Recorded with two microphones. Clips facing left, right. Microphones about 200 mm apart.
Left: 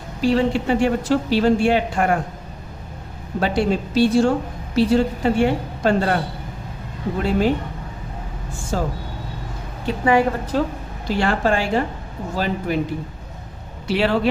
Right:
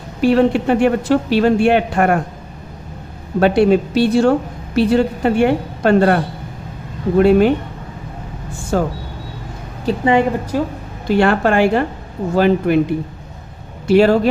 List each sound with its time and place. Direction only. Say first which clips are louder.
0.2 s a woman's voice: right 5 dB; 60° right (ahead or behind)
3.4 s a woman's voice: right 8 dB; 60° right (ahead or behind)
7.2 s a woman's voice: right 9 dB; 60° right (ahead or behind)
8.7 s a woman's voice: right 6 dB; 60° right (ahead or behind)
10.0 s a woman's voice: right 2 dB; 25° right (ahead or behind)
10.5 s a woman's voice: right 1 dB; 10° right (ahead or behind)
11.1 s a woman's voice: right 6 dB; 60° right (ahead or behind)
13.8 s speech: right 9 dB; 45° right (ahead or behind)